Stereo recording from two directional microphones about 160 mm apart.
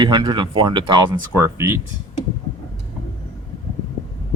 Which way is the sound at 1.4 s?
15° right (ahead or behind).